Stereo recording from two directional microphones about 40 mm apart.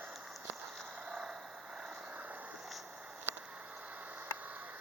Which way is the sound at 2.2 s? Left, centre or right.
Right.